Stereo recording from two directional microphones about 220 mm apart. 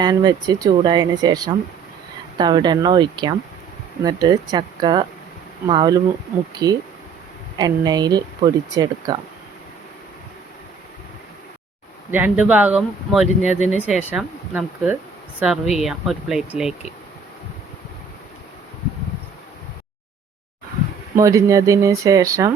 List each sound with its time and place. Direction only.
0.0 s speech: 20° right (ahead or behind)
12.1 s speech: 5° right (ahead or behind)
21.2 s speech: 15° right (ahead or behind)